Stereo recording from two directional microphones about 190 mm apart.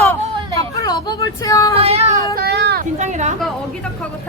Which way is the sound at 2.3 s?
55° right (ahead or behind).